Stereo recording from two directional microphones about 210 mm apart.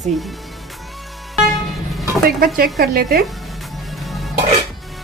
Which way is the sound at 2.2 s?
45° right (ahead or behind).